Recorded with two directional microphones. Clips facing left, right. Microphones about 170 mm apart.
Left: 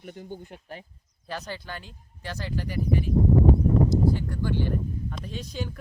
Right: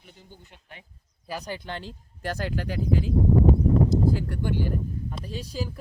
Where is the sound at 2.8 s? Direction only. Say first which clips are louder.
Right 1 dB; 90° right.